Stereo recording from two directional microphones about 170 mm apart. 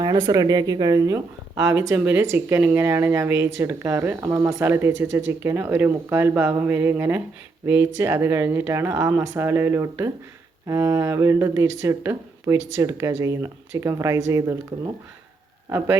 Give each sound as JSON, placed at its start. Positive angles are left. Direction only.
{"t": 0.2, "sound": "speech", "side_deg": -20}